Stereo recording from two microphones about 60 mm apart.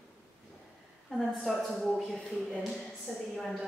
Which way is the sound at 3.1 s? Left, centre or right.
Centre.